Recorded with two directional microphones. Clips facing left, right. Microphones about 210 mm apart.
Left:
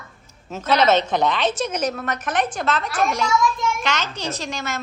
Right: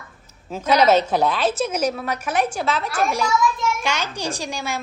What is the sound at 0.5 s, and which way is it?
A woman's voice, 10° right (ahead or behind).